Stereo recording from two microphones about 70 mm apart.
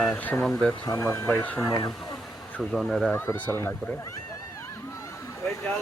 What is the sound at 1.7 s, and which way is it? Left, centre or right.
Speech, left.